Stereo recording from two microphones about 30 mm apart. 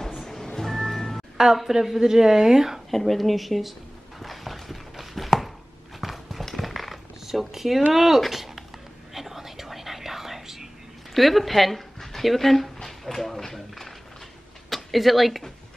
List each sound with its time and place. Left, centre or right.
0.6 s music: centre
1.7 s a woman's voice: centre
2.9 s speech: centre
4.2 s a sound: centre
5.9 s horse: centre
6.5 s a sound: centre
7.2 s a woman's voice: centre
8.3 s a sound: centre
9.1 s whispering: centre
11.1 s speech: centre
12.8 s clip-clop: centre
14.7 s speech: centre